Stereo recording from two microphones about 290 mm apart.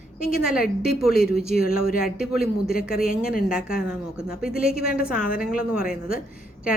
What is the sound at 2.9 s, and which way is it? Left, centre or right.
Speech, left.